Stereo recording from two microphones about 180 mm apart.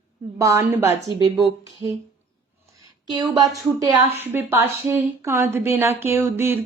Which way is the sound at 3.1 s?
25° right (ahead or behind).